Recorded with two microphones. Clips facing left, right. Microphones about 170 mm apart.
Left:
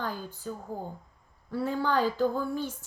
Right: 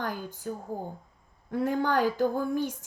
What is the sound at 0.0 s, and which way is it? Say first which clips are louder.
A woman's voice: right 1 dB; 15° right (ahead or behind).